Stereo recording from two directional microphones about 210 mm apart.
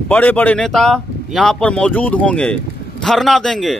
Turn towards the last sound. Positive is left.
turn(degrees=0)  # may be behind; listen again after turning